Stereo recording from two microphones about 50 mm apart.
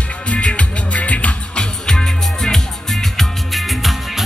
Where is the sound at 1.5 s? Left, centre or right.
Centre.